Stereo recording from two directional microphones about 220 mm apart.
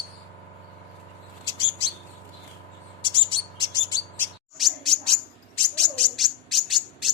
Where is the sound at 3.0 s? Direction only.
20° left (ahead or behind).